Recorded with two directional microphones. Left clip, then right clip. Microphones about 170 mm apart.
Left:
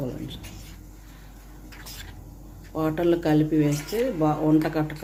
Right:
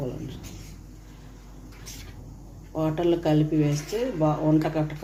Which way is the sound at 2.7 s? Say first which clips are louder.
Left 1 dB; 25° left (ahead or behind).